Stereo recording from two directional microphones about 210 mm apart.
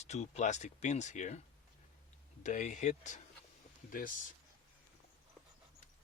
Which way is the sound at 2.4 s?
35° left (ahead or behind).